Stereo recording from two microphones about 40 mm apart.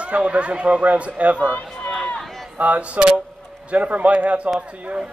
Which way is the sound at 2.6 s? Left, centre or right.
Right.